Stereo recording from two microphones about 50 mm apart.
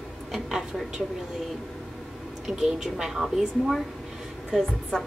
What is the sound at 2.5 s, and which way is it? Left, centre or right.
A woman's voice, centre.